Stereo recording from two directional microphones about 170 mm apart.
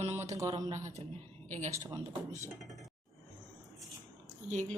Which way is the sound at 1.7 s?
20° right (ahead or behind).